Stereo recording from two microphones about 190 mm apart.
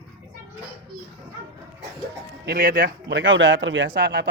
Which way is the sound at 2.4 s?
60° right (ahead or behind).